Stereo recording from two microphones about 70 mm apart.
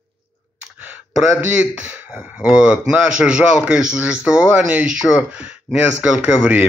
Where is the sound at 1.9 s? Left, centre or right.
Centre.